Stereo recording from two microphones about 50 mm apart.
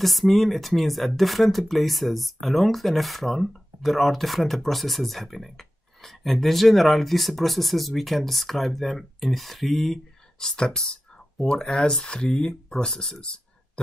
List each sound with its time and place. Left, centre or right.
0.0 s speech: centre
10.4 s speech: centre